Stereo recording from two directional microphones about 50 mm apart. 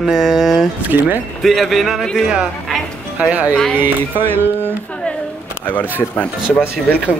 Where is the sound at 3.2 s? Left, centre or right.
Right.